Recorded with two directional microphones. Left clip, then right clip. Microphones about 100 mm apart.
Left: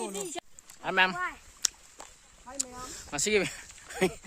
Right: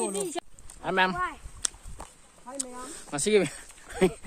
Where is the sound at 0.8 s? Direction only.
20° left (ahead or behind).